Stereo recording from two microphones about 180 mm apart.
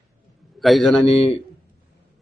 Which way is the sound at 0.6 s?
Centre (ahead or behind).